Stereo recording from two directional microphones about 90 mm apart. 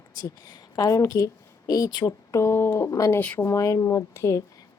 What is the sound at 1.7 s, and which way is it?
Speech, 50° left (ahead or behind).